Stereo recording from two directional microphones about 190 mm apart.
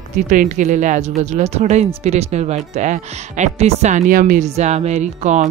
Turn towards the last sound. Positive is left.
turn(degrees=-40)  # may be behind; listen again after turning